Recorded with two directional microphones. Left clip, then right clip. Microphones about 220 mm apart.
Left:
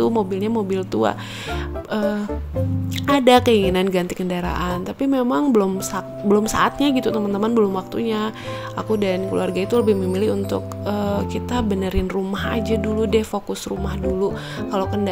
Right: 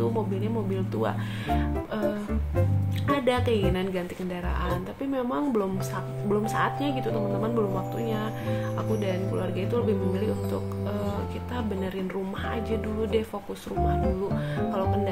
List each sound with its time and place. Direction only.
0.0 s speech: 45° left (ahead or behind)
14.7 s speech: 40° left (ahead or behind)